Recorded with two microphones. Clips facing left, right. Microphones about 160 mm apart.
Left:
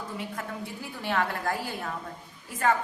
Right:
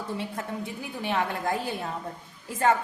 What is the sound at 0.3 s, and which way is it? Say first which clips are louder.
A woman's voice: right 3 dB; 20° right (ahead or behind).